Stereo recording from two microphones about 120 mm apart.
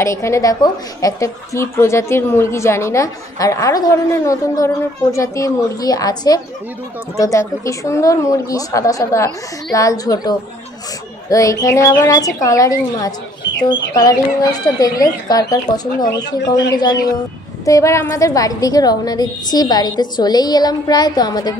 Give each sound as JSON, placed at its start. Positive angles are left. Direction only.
{"t": 0.0, "sound": "a woman's voice", "side_deg": 25}